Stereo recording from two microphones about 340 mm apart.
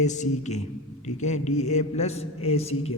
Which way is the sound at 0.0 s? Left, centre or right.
Left.